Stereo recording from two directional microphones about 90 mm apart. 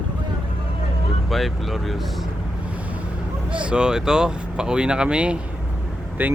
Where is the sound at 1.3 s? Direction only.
Centre (ahead or behind).